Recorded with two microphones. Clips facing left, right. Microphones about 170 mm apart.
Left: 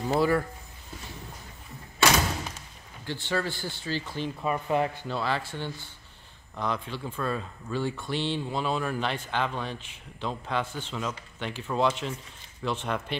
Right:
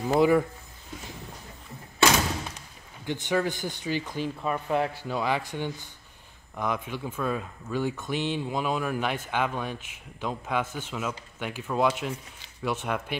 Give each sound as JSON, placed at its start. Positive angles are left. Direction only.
{"t": 0.1, "sound": "speech", "side_deg": -15}
{"t": 3.1, "sound": "speech", "side_deg": -15}
{"t": 4.4, "sound": "speech", "side_deg": 5}
{"t": 6.5, "sound": "speech", "side_deg": -5}